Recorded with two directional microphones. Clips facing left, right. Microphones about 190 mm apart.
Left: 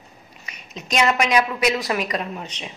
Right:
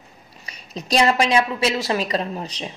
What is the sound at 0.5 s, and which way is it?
A woman's voice, 35° right (ahead or behind).